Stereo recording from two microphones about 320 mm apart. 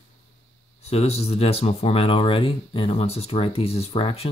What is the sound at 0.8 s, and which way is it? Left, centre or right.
Speech, centre.